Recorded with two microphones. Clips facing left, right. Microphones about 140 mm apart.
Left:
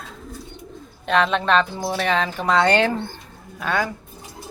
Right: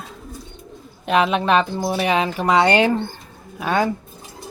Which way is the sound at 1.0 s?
10° right (ahead or behind).